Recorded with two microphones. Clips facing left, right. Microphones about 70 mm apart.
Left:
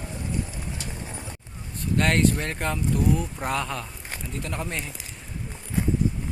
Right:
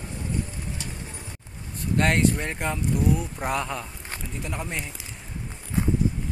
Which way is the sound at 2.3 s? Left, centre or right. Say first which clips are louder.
Even; centre.